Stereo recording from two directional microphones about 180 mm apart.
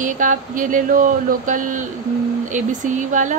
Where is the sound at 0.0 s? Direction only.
45° right (ahead or behind).